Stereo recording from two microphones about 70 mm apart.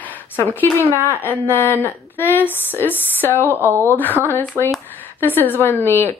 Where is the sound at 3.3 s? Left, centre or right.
Right.